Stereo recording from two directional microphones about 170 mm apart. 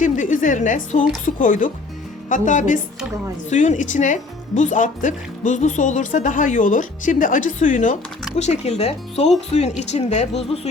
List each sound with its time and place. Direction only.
0.0 s a woman's voice: 50° left (ahead or behind)